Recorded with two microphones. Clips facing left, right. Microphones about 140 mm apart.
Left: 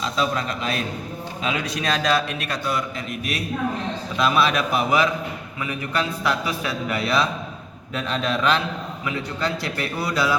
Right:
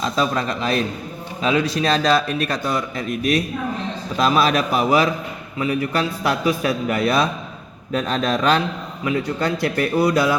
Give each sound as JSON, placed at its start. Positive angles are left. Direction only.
{"t": 0.0, "sound": "a man's voice", "side_deg": -40}